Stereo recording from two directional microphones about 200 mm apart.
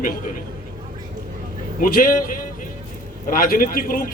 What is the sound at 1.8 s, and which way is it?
Speech, 45° left (ahead or behind).